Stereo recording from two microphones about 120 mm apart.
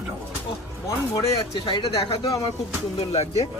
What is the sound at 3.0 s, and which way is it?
Speech, 60° left (ahead or behind).